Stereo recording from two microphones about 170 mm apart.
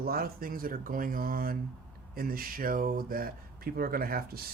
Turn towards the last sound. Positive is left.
turn(degrees=-60)  # may be behind; listen again after turning